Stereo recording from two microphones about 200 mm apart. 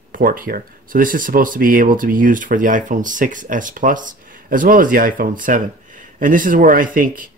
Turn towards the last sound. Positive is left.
turn(degrees=-45)  # may be behind; listen again after turning